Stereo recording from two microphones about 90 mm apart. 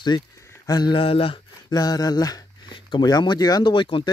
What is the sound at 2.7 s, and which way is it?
Speech, 55° left (ahead or behind).